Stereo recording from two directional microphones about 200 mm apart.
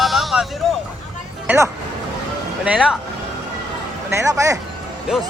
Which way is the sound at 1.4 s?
10° right (ahead or behind).